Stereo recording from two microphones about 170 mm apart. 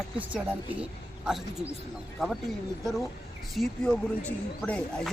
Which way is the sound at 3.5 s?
Centre (ahead or behind).